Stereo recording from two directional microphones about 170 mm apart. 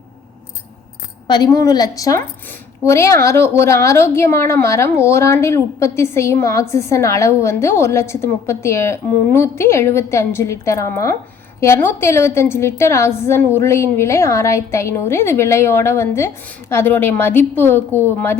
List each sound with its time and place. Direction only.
1.3 s a woman's voice: 20° left (ahead or behind)